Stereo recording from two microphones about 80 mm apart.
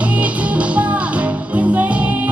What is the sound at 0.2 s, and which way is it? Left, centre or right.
Music, centre.